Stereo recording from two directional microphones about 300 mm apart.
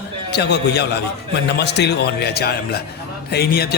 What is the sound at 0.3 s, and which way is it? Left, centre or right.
A man's voice, left.